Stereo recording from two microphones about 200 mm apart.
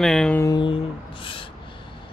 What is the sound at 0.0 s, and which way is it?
Speech, 5° left (ahead or behind).